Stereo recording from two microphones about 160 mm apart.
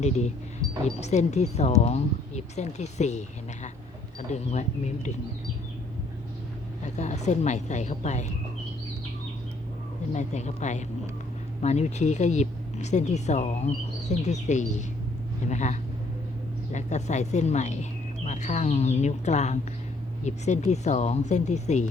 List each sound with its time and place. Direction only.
1.0 s speech: 45° left (ahead or behind)
6.8 s speech: 45° left (ahead or behind)
10.1 s speech: 45° left (ahead or behind)